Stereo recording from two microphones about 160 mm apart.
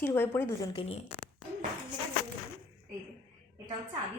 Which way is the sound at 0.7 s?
40° left (ahead or behind).